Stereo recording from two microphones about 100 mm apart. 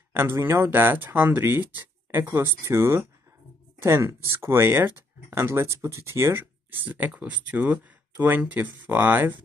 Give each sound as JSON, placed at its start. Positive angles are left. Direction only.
{"t": 0.1, "sound": "speech", "side_deg": -25}